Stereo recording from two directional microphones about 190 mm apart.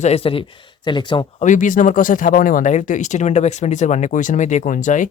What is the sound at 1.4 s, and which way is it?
Speech, 40° left (ahead or behind).